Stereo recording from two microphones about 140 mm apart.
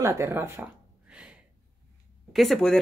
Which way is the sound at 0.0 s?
20° right (ahead or behind).